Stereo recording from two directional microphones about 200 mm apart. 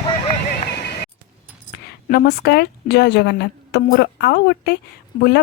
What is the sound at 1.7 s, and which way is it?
A woman's voice, 55° left (ahead or behind).